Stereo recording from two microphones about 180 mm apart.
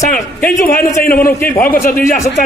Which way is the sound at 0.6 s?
50° left (ahead or behind).